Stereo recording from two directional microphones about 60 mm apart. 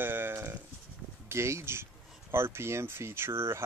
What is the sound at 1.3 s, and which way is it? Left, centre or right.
Speech, right.